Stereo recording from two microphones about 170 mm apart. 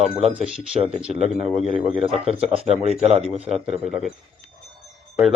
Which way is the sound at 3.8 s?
5° right (ahead or behind).